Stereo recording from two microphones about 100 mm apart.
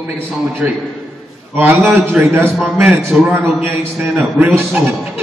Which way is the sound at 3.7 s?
20° right (ahead or behind).